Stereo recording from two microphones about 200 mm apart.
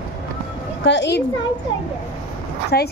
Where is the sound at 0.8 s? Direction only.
65° left (ahead or behind).